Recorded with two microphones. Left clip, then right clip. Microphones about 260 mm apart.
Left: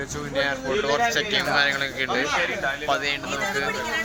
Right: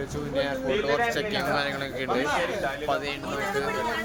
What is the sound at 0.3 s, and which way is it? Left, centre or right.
Speech, centre.